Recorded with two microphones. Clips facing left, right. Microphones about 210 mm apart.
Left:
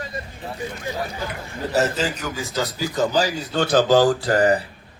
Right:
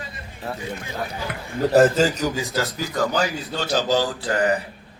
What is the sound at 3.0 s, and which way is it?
Speech, 30° left (ahead or behind).